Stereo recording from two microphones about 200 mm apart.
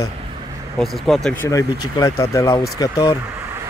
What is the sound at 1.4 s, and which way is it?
Speech, 15° left (ahead or behind).